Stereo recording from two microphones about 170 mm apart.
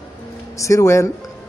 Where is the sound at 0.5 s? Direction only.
20° left (ahead or behind).